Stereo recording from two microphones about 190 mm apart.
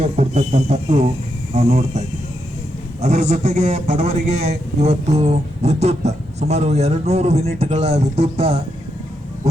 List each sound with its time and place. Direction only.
0.0 s a man's voice: 35° right (ahead or behind)